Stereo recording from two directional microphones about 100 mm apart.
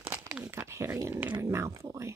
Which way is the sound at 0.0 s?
20° right (ahead or behind).